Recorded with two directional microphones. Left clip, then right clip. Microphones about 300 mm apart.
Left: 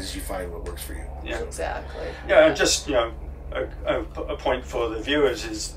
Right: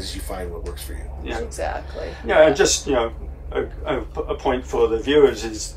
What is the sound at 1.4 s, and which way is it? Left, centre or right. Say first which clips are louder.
Speech: right 3 dB; right.